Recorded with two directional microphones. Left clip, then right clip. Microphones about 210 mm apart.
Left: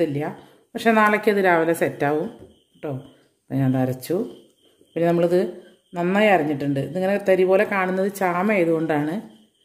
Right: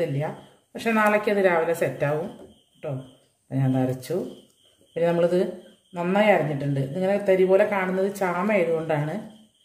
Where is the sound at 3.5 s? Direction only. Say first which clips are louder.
Left 3 dB; 50° left (ahead or behind).